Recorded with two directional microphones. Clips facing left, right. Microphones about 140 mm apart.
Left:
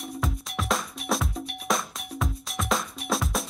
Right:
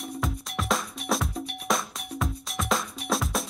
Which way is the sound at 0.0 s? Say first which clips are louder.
Even; centre (ahead or behind).